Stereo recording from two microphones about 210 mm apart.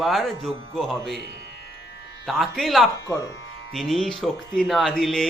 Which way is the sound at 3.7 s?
Centre (ahead or behind).